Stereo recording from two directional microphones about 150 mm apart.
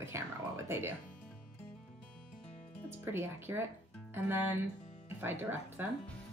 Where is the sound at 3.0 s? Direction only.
15° right (ahead or behind).